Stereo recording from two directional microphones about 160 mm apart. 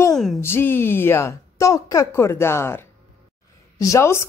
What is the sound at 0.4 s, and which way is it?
A woman's voice, 15° left (ahead or behind).